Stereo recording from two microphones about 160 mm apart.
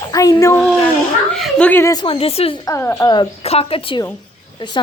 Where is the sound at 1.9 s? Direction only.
35° left (ahead or behind).